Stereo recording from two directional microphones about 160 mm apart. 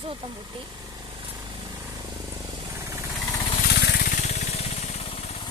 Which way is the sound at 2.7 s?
20° right (ahead or behind).